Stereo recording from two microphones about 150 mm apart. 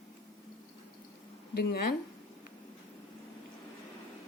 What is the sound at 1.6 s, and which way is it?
Speech, 90° left.